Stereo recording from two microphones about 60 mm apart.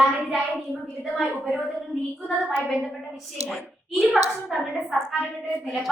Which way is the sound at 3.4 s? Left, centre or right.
Centre.